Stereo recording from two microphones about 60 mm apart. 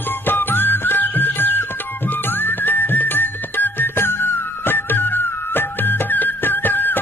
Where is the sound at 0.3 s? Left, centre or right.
Left.